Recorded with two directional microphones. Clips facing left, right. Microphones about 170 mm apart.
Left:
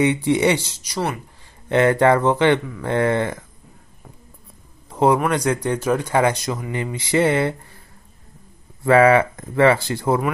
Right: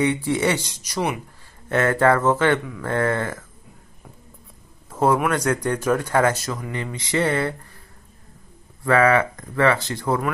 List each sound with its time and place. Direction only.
0.0 s speech: 20° left (ahead or behind)
0.9 s speech: 15° right (ahead or behind)
1.7 s speech: 15° left (ahead or behind)
4.8 s a sound: 15° left (ahead or behind)
5.3 s speech: 10° left (ahead or behind)
7.0 s speech: 25° left (ahead or behind)
8.8 s speech: 30° left (ahead or behind)